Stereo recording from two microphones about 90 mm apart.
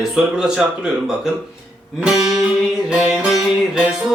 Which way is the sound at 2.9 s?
10° right (ahead or behind).